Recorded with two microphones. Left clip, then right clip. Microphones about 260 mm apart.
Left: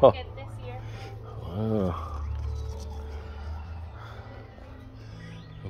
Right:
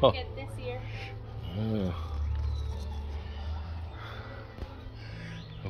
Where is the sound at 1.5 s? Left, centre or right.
Centre.